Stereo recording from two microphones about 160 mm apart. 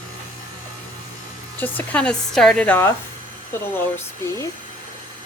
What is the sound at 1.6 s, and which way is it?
Speech, 10° left (ahead or behind).